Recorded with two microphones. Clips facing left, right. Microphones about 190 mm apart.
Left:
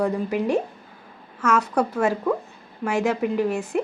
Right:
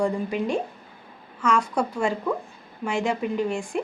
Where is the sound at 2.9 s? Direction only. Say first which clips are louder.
Left 3 dB; 5° left (ahead or behind).